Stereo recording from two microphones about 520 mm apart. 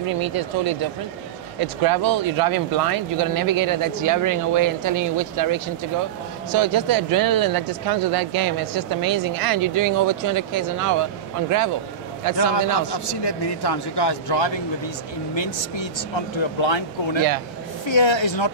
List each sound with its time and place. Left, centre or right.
0.0 s speech: right
12.4 s a man's voice: left